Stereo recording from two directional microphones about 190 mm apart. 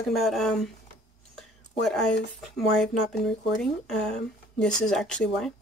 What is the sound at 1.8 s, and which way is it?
Speech, centre (ahead or behind).